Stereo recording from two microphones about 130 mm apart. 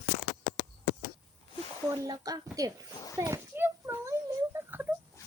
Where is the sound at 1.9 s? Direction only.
30° right (ahead or behind).